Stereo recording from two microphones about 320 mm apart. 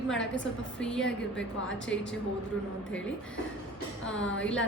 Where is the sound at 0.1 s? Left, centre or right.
Centre.